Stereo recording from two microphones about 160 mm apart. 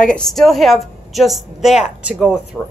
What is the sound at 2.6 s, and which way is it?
Speech, 15° left (ahead or behind).